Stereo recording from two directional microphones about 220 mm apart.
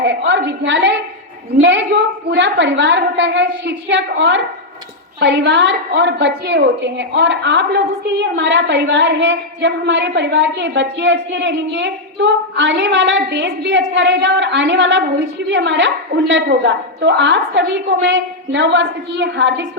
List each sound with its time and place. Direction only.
0.0 s a woman's voice: 55° right (ahead or behind)